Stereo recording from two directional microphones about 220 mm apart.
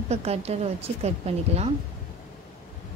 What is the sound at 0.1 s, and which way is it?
Speech, 30° right (ahead or behind).